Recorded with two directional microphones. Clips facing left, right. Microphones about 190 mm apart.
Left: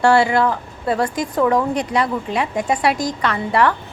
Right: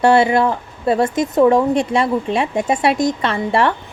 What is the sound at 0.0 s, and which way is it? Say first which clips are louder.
Speech: right 2 dB; 20° right (ahead or behind).